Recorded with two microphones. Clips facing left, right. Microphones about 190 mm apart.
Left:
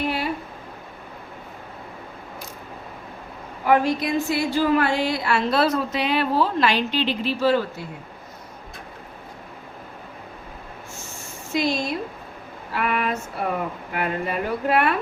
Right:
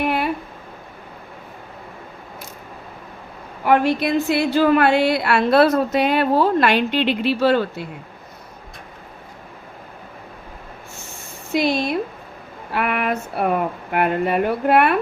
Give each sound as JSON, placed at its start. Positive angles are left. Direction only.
{"t": 0.0, "sound": "a sound", "side_deg": -55}
{"t": 3.7, "sound": "a woman's voice", "side_deg": -65}
{"t": 11.5, "sound": "a woman's voice", "side_deg": -60}